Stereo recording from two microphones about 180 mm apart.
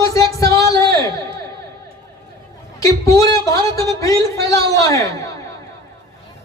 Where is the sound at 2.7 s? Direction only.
20° left (ahead or behind).